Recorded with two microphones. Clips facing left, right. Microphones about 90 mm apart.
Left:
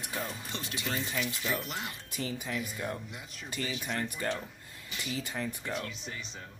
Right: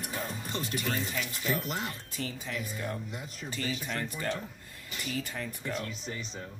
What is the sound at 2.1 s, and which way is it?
Speech, 15° left (ahead or behind).